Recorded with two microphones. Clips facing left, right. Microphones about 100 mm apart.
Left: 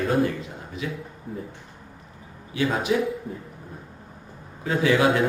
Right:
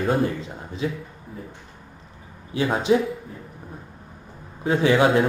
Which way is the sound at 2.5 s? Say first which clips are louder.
Right 1 dB; 30° right (ahead or behind).